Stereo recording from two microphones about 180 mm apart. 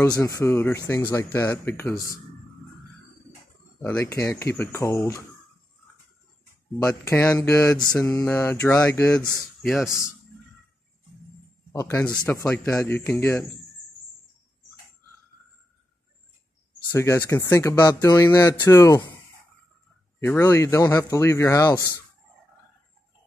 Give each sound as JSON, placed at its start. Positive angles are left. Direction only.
{"t": 0.2, "sound": "speech", "side_deg": 15}
{"t": 3.8, "sound": "speech", "side_deg": 15}
{"t": 6.8, "sound": "speech", "side_deg": 10}
{"t": 11.7, "sound": "speech", "side_deg": 20}
{"t": 16.9, "sound": "speech", "side_deg": 15}
{"t": 20.2, "sound": "speech", "side_deg": 15}